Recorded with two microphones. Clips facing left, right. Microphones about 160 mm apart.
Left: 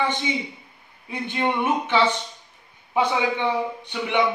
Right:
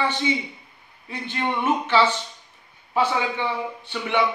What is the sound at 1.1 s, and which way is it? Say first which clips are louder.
A man's voice: left 2 dB; 15° left (ahead or behind).